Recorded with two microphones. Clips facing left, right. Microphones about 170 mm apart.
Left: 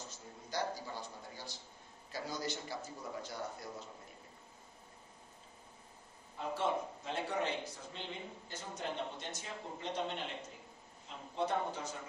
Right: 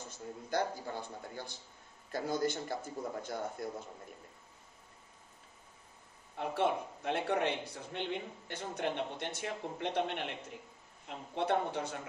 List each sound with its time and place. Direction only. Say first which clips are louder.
0.5 s a man's voice: right 4 dB; 55° right (ahead or behind)
6.3 s a man's voice: right 3 dB; 65° right (ahead or behind)